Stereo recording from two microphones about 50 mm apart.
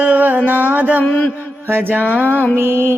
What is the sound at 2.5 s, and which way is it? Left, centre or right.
Speech, right.